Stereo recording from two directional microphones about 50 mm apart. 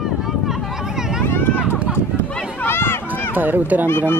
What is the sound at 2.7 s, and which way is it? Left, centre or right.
Run, left.